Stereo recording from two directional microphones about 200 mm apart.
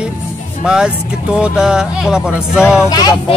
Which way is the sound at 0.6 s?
5° right (ahead or behind).